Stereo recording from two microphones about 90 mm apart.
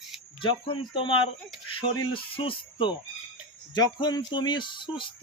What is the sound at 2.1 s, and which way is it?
Music, 80° left.